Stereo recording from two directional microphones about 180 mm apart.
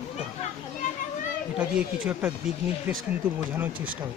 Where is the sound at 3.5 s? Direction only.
10° right (ahead or behind).